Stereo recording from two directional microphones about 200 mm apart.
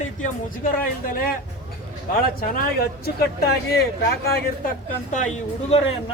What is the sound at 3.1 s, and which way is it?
Speech, 50° left (ahead or behind).